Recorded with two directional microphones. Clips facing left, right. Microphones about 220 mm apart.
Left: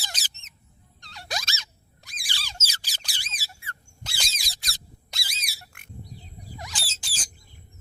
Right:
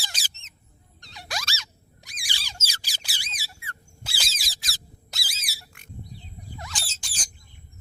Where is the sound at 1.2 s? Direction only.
20° left (ahead or behind).